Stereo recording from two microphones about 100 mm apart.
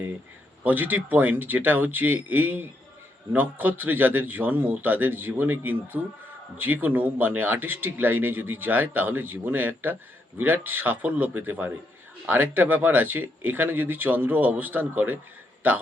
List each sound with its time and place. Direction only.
0.6 s speech: 20° right (ahead or behind)